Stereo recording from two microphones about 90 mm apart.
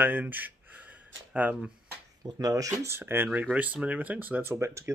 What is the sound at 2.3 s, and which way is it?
Speech, 40° right (ahead or behind).